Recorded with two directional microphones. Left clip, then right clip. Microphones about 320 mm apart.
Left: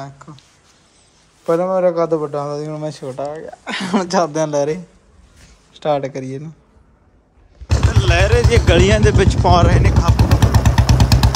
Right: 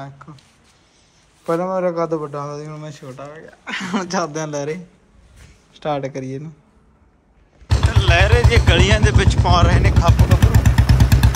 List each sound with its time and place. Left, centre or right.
0.0 s speech: centre
1.4 s a man's voice: centre
7.6 s speech: centre
10.5 s motorcycle: left